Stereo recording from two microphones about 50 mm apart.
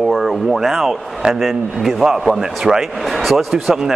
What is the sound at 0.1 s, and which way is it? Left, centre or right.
Speech, centre.